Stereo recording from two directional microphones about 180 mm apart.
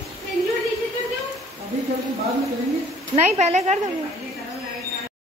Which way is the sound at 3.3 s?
40° right (ahead or behind).